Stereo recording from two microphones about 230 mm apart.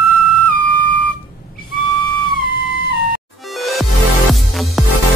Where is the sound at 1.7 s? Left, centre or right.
Centre.